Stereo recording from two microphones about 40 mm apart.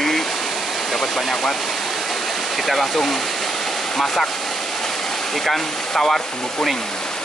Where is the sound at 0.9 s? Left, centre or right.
Centre.